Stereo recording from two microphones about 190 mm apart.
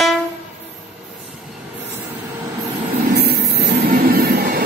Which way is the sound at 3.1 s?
60° right (ahead or behind).